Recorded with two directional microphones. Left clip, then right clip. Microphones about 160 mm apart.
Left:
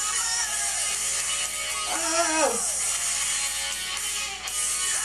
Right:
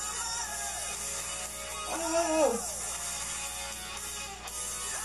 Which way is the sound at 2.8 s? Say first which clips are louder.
Left 9 dB; 15° left (ahead or behind).